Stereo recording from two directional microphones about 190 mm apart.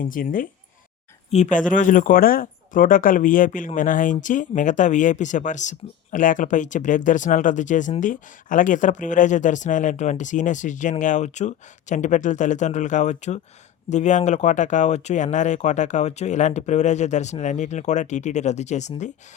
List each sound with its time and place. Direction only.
0.0 s speech: 45° left (ahead or behind)